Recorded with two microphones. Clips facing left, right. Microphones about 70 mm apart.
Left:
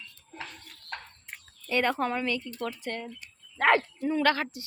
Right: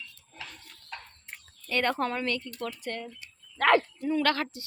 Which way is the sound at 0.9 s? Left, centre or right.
Left.